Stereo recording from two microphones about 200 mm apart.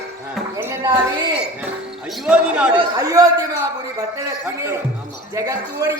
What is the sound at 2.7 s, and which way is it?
A man's voice, 20° right (ahead or behind).